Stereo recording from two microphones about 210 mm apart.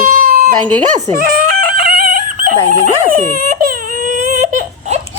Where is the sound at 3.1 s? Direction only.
40° right (ahead or behind).